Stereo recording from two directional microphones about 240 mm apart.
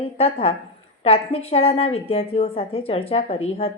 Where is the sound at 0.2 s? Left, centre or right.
Left.